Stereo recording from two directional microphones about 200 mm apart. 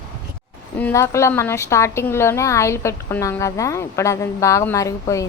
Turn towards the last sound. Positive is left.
turn(degrees=15)  # may be behind; listen again after turning